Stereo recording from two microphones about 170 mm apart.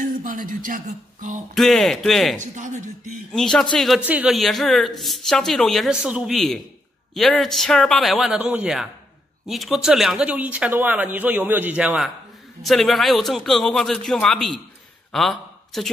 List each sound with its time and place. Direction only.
0.0 s speech: 50° right (ahead or behind)
1.5 s a woman's voice: centre (ahead or behind)
2.5 s speech: 45° right (ahead or behind)
3.3 s a woman's voice: 5° left (ahead or behind)